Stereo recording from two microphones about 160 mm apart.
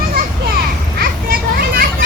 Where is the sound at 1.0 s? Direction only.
65° right (ahead or behind).